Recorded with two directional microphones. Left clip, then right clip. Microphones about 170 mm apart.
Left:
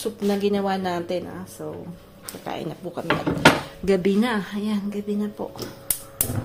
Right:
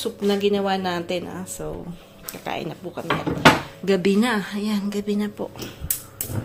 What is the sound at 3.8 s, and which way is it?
Speech, centre (ahead or behind).